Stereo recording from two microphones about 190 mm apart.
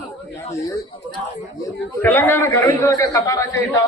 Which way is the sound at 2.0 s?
10° left (ahead or behind).